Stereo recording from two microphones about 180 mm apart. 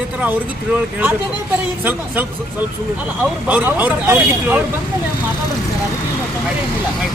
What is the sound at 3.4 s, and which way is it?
Speech, 10° right (ahead or behind).